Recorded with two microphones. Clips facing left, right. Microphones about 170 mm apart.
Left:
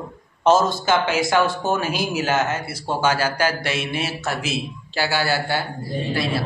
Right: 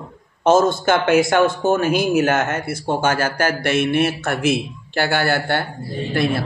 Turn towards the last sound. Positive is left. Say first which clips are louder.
# right 3 dB
turn(degrees=-55)  # may be behind; listen again after turning